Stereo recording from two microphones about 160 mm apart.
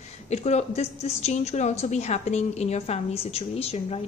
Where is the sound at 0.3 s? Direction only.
45° left (ahead or behind).